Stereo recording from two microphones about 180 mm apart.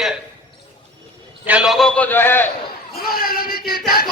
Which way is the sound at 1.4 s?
5° right (ahead or behind).